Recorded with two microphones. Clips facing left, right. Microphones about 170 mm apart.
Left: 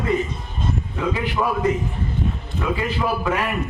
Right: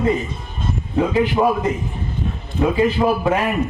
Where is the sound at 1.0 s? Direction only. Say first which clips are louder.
Right 8 dB; 25° right (ahead or behind).